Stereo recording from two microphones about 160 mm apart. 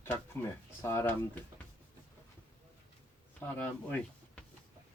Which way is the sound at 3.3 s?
10° left (ahead or behind).